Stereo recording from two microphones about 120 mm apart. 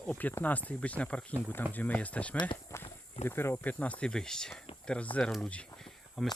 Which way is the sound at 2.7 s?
25° left (ahead or behind).